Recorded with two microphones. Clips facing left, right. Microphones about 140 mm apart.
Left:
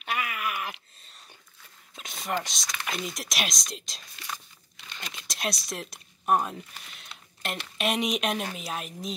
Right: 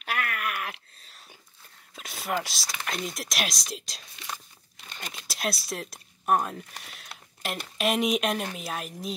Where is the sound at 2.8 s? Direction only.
Centre (ahead or behind).